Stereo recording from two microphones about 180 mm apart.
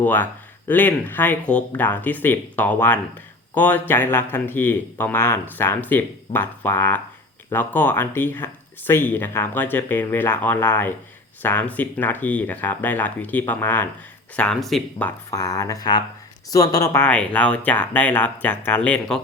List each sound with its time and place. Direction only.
0.0 s speech: 10° left (ahead or behind)
15.3 s speech: 20° left (ahead or behind)